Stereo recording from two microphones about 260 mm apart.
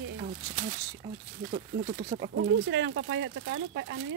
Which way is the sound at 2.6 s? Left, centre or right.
Right.